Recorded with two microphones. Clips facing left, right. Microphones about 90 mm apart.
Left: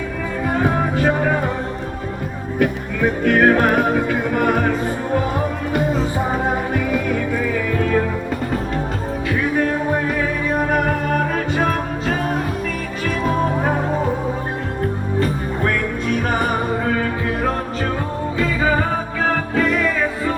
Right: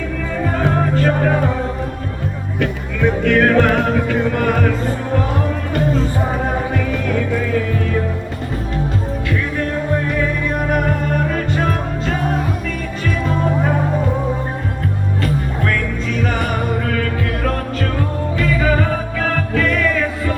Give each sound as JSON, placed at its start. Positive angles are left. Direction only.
{"t": 0.4, "sound": "music", "side_deg": 15}
{"t": 2.6, "sound": "music", "side_deg": 10}
{"t": 10.1, "sound": "music", "side_deg": 5}
{"t": 15.2, "sound": "music", "side_deg": 25}
{"t": 16.0, "sound": "music", "side_deg": 50}
{"t": 16.8, "sound": "music", "side_deg": 20}